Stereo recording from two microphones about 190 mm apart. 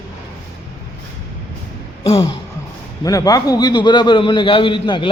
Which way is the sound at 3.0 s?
20° left (ahead or behind).